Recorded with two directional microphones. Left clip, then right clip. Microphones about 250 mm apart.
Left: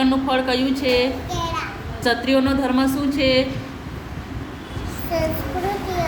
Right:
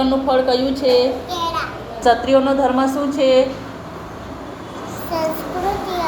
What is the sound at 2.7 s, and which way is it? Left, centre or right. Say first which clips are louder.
Speech: right 3 dB; left.